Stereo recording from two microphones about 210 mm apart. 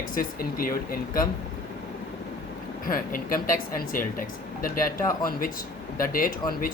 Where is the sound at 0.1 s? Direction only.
45° left (ahead or behind).